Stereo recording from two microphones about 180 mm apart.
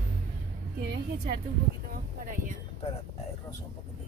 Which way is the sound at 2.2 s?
45° right (ahead or behind).